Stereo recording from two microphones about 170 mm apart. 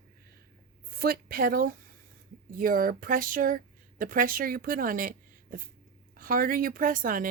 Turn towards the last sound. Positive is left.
turn(degrees=-55)  # may be behind; listen again after turning